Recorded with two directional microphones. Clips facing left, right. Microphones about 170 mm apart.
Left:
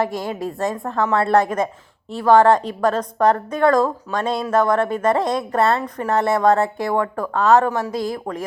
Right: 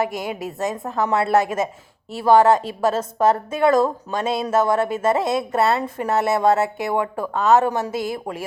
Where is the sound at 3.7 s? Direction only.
25° right (ahead or behind).